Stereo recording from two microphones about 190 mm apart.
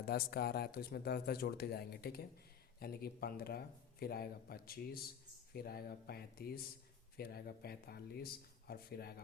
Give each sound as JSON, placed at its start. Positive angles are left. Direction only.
{"t": 0.0, "sound": "a man's voice", "side_deg": 55}